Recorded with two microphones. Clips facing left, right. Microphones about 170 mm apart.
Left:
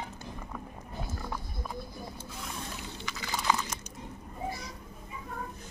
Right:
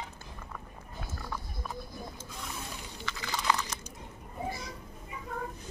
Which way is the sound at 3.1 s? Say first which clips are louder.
Right 4 dB; 15° left (ahead or behind).